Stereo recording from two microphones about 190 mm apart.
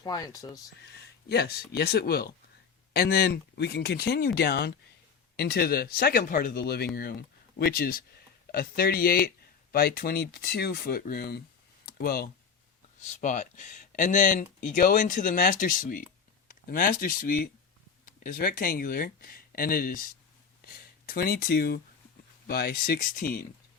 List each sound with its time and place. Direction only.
0.0 s speech: 20° left (ahead or behind)
1.3 s speech: 55° left (ahead or behind)
13.0 s speech: 40° left (ahead or behind)